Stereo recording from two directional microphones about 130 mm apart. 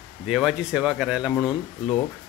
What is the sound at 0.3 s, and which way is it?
Speech, 5° right (ahead or behind).